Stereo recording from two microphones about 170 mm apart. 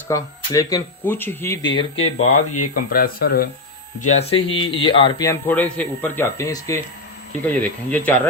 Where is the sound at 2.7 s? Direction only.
60° left (ahead or behind).